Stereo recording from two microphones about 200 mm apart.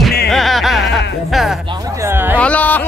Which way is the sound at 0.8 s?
60° left (ahead or behind).